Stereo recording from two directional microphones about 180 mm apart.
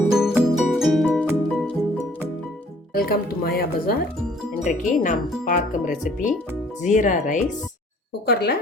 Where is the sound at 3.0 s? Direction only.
55° left (ahead or behind).